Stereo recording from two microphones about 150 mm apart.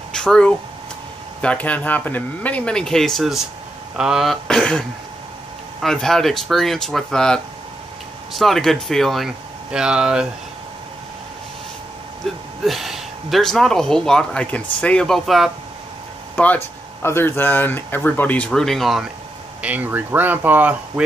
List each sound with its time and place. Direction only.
0.1 s speech: 5° left (ahead or behind)
12.6 s speech: centre (ahead or behind)
16.3 s speech: 10° left (ahead or behind)
19.6 s speech: 10° right (ahead or behind)